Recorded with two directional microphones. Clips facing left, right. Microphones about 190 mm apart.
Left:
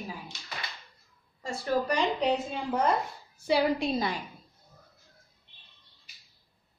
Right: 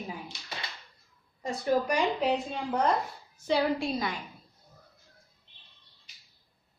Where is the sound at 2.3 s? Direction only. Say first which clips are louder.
Even; centre (ahead or behind).